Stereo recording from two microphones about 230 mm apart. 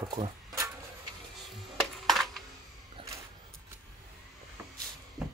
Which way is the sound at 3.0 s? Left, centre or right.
Right.